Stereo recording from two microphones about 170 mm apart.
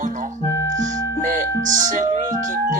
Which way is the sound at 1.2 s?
45° right (ahead or behind).